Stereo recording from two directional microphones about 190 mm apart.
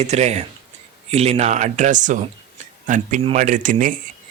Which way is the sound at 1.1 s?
35° right (ahead or behind).